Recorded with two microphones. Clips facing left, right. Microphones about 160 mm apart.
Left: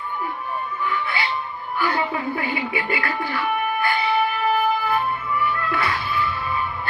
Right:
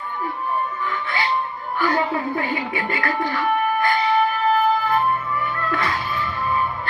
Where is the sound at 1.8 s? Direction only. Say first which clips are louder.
Right 2 dB; 40° right (ahead or behind).